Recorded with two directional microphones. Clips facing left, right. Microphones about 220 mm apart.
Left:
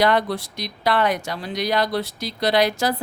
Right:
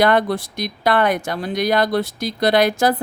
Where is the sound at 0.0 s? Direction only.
50° right (ahead or behind).